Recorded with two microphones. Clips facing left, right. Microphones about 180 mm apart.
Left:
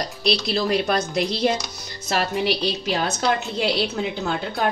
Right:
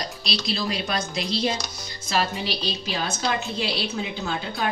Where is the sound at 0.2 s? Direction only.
60° left (ahead or behind).